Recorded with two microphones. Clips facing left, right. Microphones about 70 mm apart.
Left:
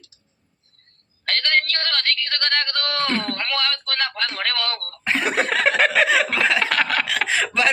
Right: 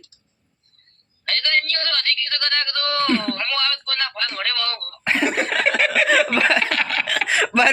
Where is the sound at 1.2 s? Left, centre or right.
Left.